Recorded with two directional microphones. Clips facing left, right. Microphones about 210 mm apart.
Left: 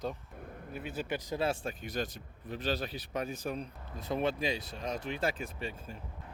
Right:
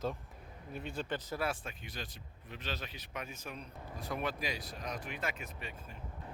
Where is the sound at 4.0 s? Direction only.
25° left (ahead or behind).